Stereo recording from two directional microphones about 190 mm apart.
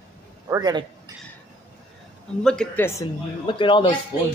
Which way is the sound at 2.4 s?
5° left (ahead or behind).